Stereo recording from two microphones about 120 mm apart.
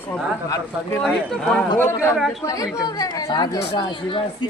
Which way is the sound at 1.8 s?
20° left (ahead or behind).